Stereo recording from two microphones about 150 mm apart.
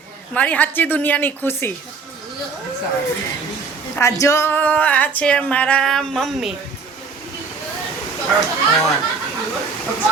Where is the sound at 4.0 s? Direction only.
20° left (ahead or behind); by 6.5 s centre (ahead or behind).